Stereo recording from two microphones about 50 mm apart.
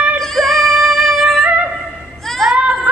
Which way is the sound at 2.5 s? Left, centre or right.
Centre.